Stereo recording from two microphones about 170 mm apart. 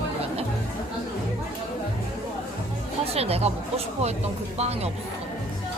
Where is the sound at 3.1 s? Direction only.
35° right (ahead or behind).